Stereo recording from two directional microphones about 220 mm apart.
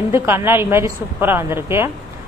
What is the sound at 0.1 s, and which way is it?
A woman's voice, 10° right (ahead or behind).